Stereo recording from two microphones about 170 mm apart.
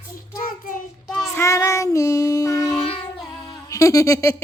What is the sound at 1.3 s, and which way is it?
Child singing, 15° left (ahead or behind).